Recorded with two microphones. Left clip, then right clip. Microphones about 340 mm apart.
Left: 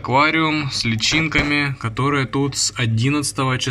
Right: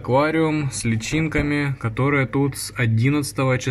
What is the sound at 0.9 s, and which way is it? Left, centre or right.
Speech, left.